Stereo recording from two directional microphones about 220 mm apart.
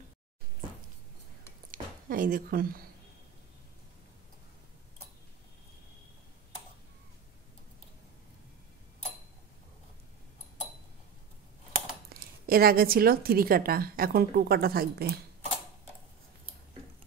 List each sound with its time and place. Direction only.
1.7 s speech: 40° right (ahead or behind)
12.1 s a woman's voice: 45° right (ahead or behind)